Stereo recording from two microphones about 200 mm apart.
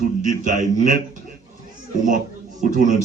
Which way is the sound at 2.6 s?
40° right (ahead or behind).